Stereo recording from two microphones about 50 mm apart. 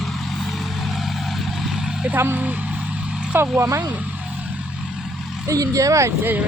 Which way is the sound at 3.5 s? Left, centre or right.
Right.